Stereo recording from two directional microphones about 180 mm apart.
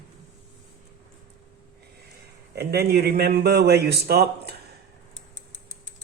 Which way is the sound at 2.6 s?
60° right (ahead or behind).